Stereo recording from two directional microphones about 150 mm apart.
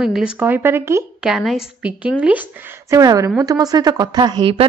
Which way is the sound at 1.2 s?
Centre (ahead or behind).